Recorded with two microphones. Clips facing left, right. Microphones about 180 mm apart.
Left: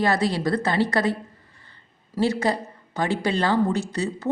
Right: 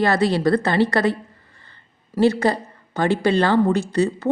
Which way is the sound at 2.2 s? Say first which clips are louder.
Right 5 dB; 60° right (ahead or behind).